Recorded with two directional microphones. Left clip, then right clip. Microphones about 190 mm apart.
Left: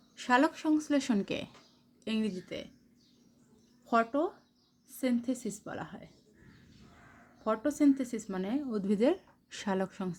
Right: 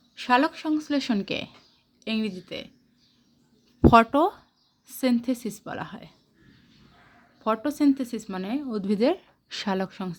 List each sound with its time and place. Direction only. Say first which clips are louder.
0.2 s speech: right 5 dB; 15° right (ahead or behind)
3.8 s speech: right 12 dB; 45° right (ahead or behind)
4.9 s speech: right 7 dB; 35° right (ahead or behind)
7.4 s speech: right 5 dB; 25° right (ahead or behind)